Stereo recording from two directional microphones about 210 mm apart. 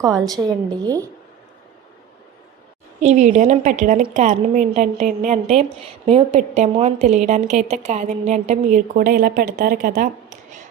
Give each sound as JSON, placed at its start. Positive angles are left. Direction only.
{"t": 0.3, "sound": "a woman's voice", "side_deg": -20}
{"t": 3.0, "sound": "a woman's voice", "side_deg": -35}